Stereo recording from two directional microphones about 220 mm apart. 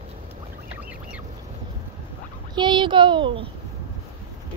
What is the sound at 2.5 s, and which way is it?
Speech, 20° right (ahead or behind).